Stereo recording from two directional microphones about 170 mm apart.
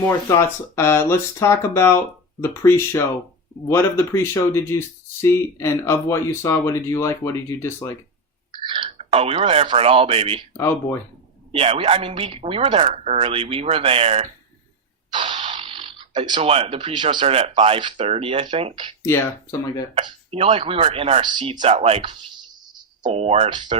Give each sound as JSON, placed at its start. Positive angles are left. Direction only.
{"t": 0.3, "sound": "speech", "side_deg": 15}
{"t": 8.5, "sound": "speech", "side_deg": -30}
{"t": 10.6, "sound": "speech", "side_deg": 15}
{"t": 11.5, "sound": "speech", "side_deg": -35}
{"t": 19.0, "sound": "speech", "side_deg": 15}
{"t": 19.9, "sound": "speech", "side_deg": -35}
{"t": 23.0, "sound": "speech", "side_deg": -40}